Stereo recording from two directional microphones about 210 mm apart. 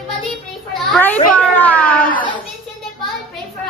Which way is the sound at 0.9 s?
5° left (ahead or behind).